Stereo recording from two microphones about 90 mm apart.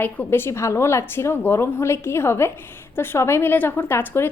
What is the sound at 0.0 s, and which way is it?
A woman's voice, 25° left (ahead or behind).